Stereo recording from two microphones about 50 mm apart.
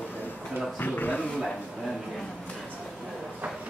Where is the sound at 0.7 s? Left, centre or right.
Left.